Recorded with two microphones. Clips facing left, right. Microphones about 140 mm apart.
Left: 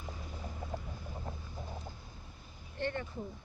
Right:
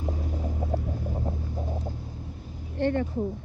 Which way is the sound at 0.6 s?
75° right (ahead or behind).